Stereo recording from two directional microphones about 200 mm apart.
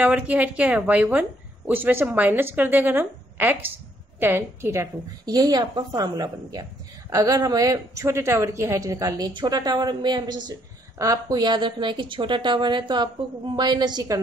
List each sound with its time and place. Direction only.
0.0 s a woman's voice: 5° right (ahead or behind)